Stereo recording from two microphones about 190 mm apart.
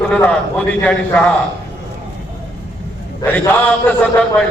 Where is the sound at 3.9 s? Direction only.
10° left (ahead or behind).